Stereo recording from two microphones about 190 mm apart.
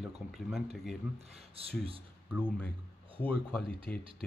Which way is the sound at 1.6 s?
30° right (ahead or behind).